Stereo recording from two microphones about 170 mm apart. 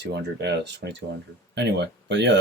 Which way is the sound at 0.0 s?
80° right.